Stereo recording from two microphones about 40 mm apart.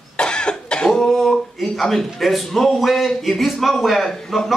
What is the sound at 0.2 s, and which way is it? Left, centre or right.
Cough, left.